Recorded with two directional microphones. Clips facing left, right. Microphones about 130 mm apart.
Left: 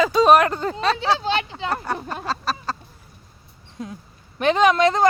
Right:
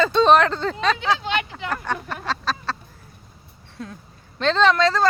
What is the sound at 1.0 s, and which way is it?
Speech, 35° left (ahead or behind).